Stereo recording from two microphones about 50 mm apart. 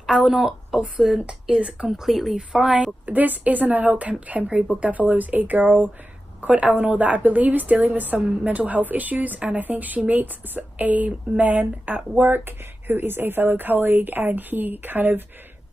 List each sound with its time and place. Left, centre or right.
0.0 s speech: centre
1.2 s speech: right
1.9 s speech: centre
3.1 s a woman's voice: right
4.1 s a woman's voice: right